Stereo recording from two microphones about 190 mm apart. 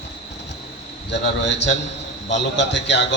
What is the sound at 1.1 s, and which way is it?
A man's voice, 65° left (ahead or behind).